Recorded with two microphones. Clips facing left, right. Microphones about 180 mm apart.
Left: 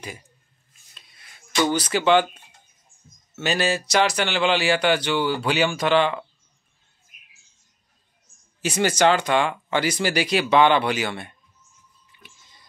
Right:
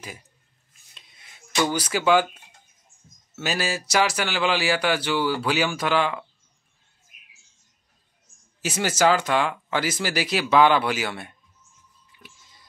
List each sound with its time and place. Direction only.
0.9 s a sound: 20° right (ahead or behind)
1.5 s speech: 10° right (ahead or behind)
3.3 s speech: 5° right (ahead or behind)
8.5 s speech: 5° right (ahead or behind)